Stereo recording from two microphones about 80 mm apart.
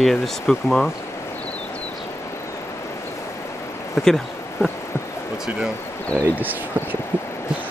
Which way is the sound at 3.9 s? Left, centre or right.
Centre.